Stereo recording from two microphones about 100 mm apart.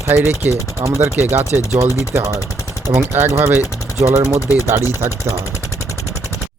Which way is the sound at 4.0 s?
25° right (ahead or behind).